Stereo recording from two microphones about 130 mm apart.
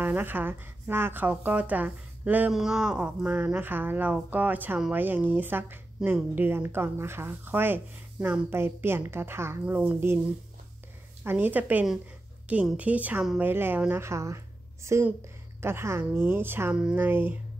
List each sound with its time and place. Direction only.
0.0 s a woman's voice: 15° right (ahead or behind)
11.2 s a woman's voice: 15° right (ahead or behind)